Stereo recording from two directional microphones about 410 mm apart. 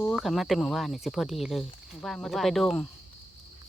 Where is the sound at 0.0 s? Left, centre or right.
Centre.